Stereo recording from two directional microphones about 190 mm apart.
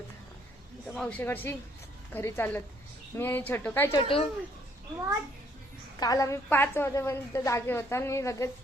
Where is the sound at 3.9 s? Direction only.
30° left (ahead or behind).